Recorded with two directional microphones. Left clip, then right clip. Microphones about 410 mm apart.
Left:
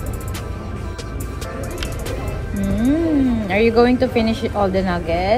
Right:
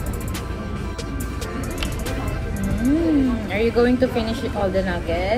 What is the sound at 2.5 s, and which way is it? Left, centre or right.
Music, centre.